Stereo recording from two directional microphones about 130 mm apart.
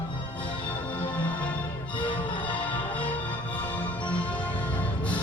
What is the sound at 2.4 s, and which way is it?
Music, 10° left (ahead or behind).